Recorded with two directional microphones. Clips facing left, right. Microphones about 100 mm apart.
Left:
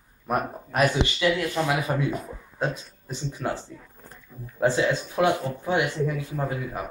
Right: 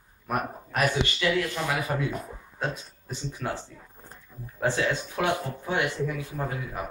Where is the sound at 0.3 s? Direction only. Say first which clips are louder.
Left 3 dB; 20° left (ahead or behind).